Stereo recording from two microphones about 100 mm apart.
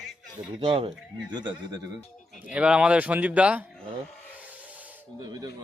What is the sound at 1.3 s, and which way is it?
Speech, 45° right (ahead or behind).